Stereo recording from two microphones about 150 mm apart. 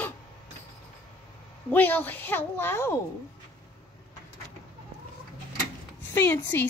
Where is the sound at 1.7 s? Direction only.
10° left (ahead or behind).